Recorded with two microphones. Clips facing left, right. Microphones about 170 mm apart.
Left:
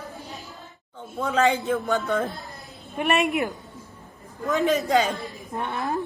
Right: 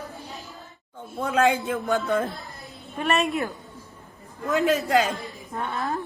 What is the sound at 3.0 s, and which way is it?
Speech, 15° left (ahead or behind).